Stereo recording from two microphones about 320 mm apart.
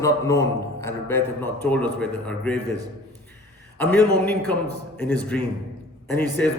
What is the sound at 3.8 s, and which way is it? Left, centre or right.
A man's voice, centre.